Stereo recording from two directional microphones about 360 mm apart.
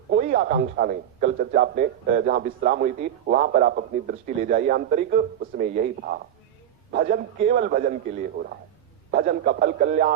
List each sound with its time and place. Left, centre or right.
0.1 s speech: right